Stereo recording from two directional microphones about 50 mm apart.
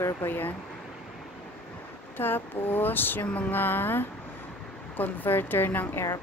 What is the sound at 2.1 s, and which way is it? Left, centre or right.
Speech, left.